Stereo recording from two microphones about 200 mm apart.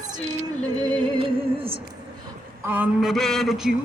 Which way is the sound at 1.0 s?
25° right (ahead or behind).